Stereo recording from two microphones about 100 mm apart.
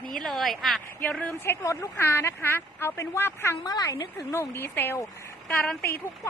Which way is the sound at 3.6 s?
35° left (ahead or behind).